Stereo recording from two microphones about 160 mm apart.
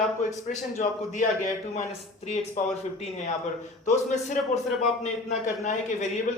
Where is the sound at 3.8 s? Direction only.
50° left (ahead or behind).